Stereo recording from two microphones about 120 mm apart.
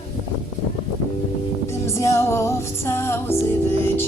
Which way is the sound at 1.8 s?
25° left (ahead or behind).